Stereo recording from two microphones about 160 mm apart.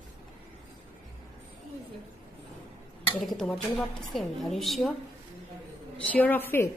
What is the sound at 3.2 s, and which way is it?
A woman's voice, centre (ahead or behind).